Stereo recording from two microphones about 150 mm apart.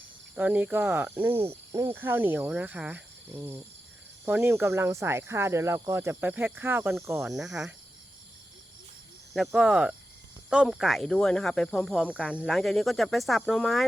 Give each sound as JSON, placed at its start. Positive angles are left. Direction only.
{"t": 0.3, "sound": "speech", "side_deg": -10}
{"t": 7.3, "sound": "speech", "side_deg": 0}
{"t": 9.3, "sound": "speech", "side_deg": 0}